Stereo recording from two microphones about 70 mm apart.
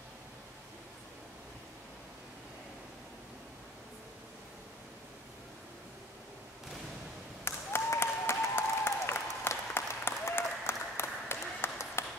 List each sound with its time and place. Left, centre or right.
7.4 s applause: left